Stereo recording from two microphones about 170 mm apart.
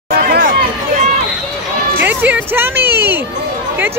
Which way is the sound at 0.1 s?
60° right (ahead or behind).